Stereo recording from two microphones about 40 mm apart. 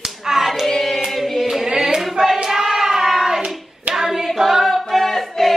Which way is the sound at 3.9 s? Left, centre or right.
Centre.